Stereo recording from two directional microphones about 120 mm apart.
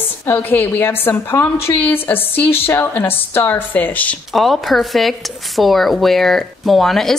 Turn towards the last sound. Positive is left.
turn(degrees=0)  # may be behind; listen again after turning